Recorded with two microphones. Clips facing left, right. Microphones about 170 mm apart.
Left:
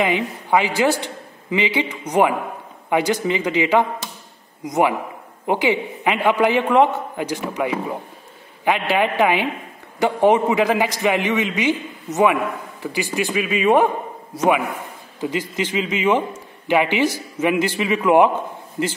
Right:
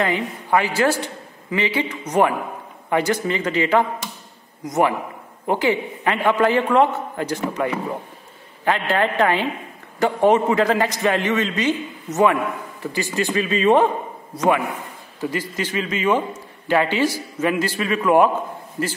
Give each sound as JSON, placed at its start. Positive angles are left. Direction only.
{"t": 0.0, "sound": "a man's voice", "side_deg": 15}
{"t": 12.8, "sound": "a man's voice", "side_deg": 15}
{"t": 15.1, "sound": "a man's voice", "side_deg": 20}